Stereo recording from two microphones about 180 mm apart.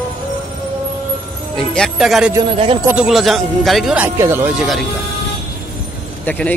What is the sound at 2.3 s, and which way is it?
Speech, 30° right (ahead or behind).